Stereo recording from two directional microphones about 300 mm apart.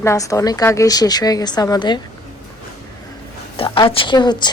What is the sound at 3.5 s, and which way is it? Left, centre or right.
Speech, centre.